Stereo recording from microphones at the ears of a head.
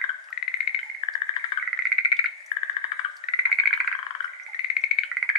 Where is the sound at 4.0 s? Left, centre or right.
Left.